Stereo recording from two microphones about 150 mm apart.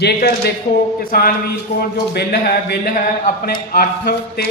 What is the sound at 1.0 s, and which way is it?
Speech, 75° left (ahead or behind).